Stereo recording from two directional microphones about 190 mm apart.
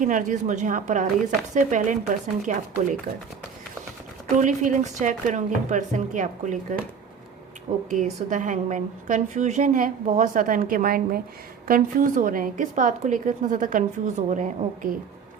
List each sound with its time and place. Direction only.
0.0 s a woman's voice: 45° right (ahead or behind)
4.4 s a woman's voice: 40° right (ahead or behind)
7.9 s a woman's voice: 40° right (ahead or behind)